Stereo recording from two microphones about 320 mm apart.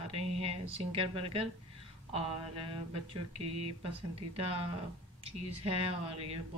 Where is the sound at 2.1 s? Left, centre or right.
Centre.